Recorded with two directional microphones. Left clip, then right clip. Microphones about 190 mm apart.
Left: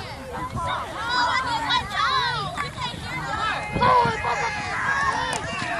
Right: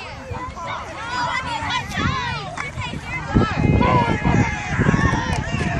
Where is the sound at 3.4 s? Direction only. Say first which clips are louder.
Left 1 dB; 30° right (ahead or behind).